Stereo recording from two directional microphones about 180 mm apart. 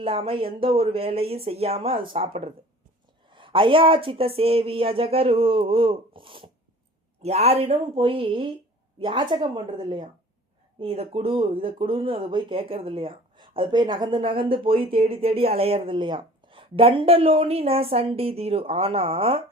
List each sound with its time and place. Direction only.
0.0 s a woman's voice: 30° right (ahead or behind)